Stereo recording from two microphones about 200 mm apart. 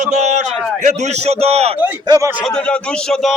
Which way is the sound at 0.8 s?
35° right (ahead or behind).